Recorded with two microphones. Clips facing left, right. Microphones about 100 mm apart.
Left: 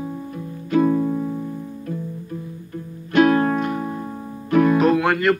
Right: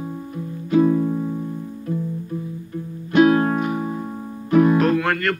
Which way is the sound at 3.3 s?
15° right (ahead or behind).